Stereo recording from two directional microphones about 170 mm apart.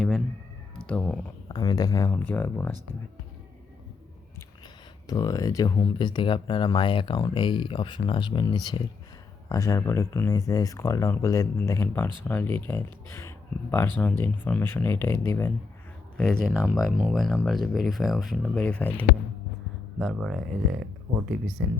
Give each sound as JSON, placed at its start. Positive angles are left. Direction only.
{"t": 0.8, "sound": "speech", "side_deg": 5}
{"t": 1.5, "sound": "speech", "side_deg": 25}
{"t": 5.0, "sound": "speech", "side_deg": 20}
{"t": 16.1, "sound": "speech", "side_deg": 5}